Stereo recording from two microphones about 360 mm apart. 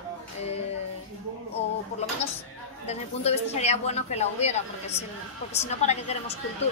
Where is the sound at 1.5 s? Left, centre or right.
Centre.